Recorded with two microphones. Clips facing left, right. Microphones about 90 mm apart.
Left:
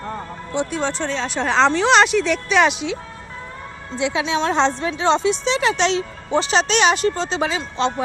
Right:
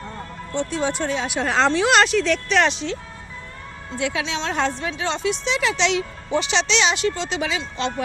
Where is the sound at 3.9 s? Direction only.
20° left (ahead or behind).